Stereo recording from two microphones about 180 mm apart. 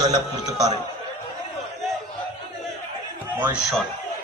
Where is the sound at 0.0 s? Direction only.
20° right (ahead or behind).